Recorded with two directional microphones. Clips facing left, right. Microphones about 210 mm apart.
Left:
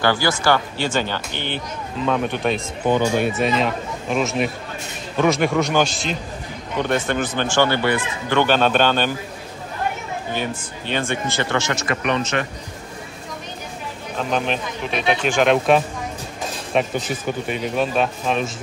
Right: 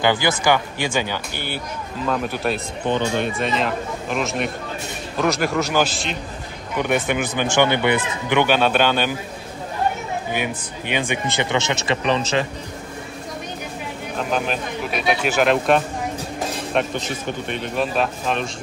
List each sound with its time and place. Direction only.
0.0 s a man's voice: 20° right (ahead or behind); by 6.1 s centre (ahead or behind)
6.8 s a man's voice: 10° right (ahead or behind)
10.3 s a man's voice: 15° right (ahead or behind); by 12.3 s 30° right (ahead or behind)
14.1 s speech: 5° right (ahead or behind)